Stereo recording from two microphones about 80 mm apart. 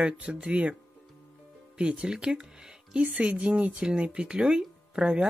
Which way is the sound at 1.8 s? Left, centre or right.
Centre.